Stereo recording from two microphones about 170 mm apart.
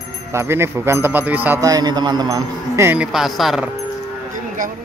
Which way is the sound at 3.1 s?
Centre (ahead or behind).